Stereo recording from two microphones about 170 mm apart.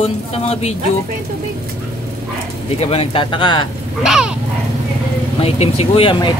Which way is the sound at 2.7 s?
35° left (ahead or behind).